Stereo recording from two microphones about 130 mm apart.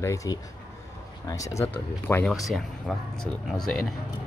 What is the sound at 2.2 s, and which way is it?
Speech, centre (ahead or behind).